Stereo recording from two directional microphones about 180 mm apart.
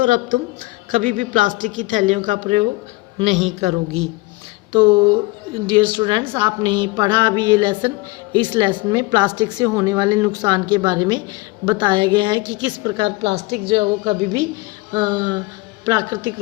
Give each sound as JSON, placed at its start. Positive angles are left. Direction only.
{"t": 0.0, "sound": "a woman's voice", "side_deg": -45}